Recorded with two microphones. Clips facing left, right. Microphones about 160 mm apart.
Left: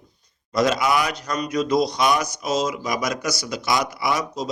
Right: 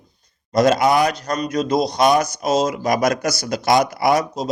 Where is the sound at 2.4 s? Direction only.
55° right (ahead or behind).